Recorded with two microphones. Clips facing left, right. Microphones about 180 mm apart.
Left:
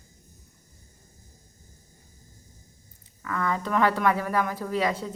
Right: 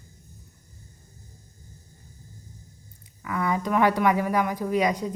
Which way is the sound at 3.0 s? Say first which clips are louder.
Right 1 dB; 10° right (ahead or behind).